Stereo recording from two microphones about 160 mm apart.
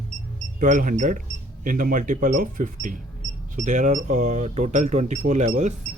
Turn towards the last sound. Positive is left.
turn(degrees=-45)  # may be behind; listen again after turning